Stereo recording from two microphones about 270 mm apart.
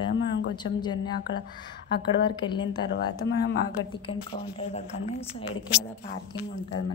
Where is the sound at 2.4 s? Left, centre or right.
Centre.